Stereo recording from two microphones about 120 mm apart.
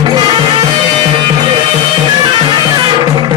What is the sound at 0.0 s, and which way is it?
Music, 35° right (ahead or behind).